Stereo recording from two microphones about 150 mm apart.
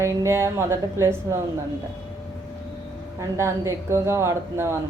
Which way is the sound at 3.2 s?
20° right (ahead or behind).